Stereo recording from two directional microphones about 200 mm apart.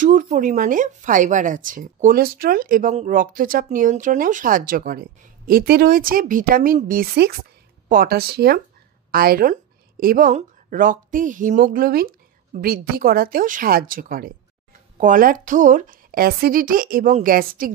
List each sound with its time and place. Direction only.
0.0 s speech: 40° right (ahead or behind)